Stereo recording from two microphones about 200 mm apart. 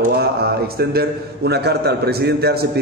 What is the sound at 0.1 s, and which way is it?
A man's voice, 50° right (ahead or behind).